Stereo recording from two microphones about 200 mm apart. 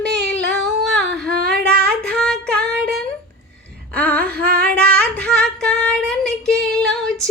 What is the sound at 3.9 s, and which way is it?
Humming, 5° left (ahead or behind).